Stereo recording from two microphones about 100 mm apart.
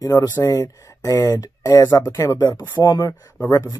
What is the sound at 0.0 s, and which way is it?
Speech, 35° left (ahead or behind).